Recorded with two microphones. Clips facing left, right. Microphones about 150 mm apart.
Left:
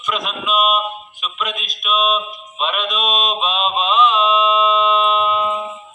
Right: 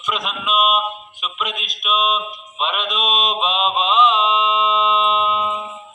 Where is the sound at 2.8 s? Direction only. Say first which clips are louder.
Left 1 dB; 25° right (ahead or behind).